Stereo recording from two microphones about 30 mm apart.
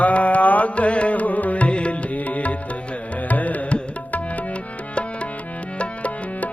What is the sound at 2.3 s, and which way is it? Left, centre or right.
Music, left.